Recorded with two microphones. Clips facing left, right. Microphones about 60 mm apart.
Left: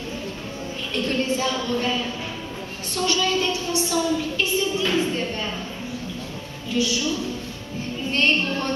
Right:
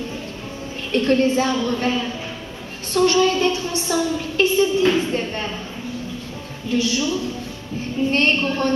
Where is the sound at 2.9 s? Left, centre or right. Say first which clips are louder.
Right 6 dB; right.